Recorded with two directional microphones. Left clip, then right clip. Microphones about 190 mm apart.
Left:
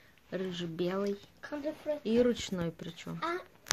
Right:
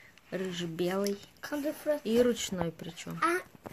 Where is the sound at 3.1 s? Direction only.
40° right (ahead or behind).